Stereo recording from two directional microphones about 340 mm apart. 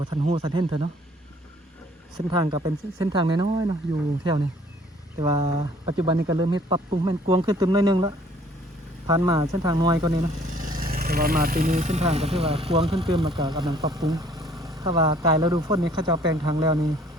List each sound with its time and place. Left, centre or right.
0.0 s speech: centre
2.1 s speech: centre
5.2 s speech: centre